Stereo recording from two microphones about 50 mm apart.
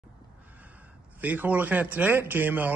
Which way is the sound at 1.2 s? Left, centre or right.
Right.